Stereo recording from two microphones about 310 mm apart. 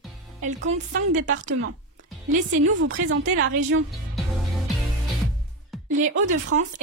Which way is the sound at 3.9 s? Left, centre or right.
Centre.